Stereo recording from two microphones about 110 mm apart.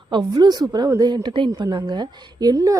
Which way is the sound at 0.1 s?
40° right (ahead or behind).